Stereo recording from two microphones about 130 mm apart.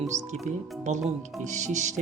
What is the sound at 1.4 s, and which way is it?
Music, 65° right (ahead or behind).